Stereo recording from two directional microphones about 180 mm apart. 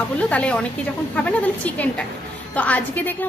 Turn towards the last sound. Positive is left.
turn(degrees=10)  # may be behind; listen again after turning